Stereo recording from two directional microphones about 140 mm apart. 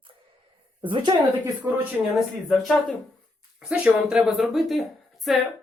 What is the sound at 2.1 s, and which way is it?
Speech, centre (ahead or behind).